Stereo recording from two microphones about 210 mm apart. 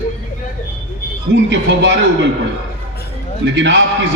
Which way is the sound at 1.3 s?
60° right (ahead or behind).